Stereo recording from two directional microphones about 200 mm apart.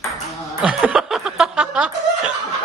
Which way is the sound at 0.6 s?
5° right (ahead or behind).